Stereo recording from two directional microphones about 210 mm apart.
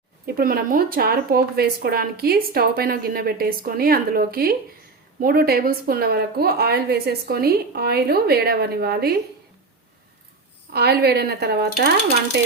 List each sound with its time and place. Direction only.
0.3 s speech: 45° right (ahead or behind)
10.7 s speech: 50° right (ahead or behind)